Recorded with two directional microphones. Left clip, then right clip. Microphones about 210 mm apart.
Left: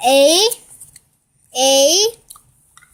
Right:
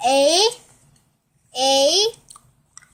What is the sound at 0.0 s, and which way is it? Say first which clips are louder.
Speech: left 4 dB; 30° left (ahead or behind).